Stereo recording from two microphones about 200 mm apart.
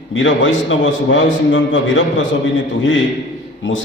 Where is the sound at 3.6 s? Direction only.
70° left (ahead or behind).